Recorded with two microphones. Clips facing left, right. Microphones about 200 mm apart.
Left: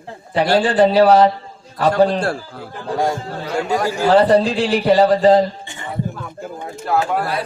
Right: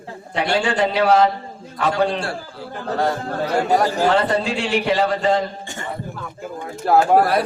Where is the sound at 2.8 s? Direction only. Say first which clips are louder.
Left 1 dB; 10° left (ahead or behind).